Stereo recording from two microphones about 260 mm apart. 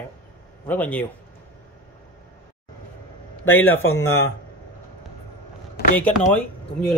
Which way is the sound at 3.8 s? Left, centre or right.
Left.